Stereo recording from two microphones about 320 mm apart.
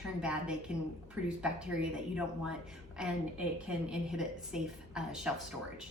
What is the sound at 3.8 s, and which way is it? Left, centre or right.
A woman's voice, centre.